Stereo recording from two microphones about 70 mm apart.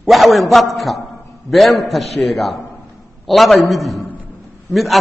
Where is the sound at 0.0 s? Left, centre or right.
Centre.